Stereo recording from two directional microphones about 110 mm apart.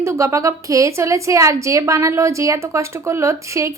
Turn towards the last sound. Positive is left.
turn(degrees=-25)  # may be behind; listen again after turning